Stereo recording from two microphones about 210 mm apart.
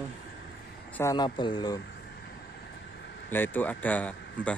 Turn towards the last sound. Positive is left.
turn(degrees=5)  # may be behind; listen again after turning